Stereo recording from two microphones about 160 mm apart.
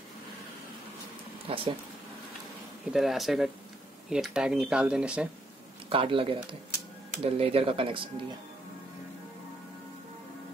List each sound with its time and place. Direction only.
1.5 s speech: 35° right (ahead or behind)
2.9 s speech: centre (ahead or behind)
5.9 s speech: 35° right (ahead or behind)